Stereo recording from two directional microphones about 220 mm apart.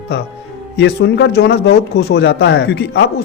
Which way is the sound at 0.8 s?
50° left (ahead or behind).